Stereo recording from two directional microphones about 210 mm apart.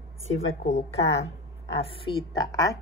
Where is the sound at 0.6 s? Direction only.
30° left (ahead or behind).